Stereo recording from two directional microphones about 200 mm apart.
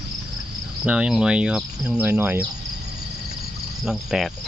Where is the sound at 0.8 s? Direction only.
5° right (ahead or behind).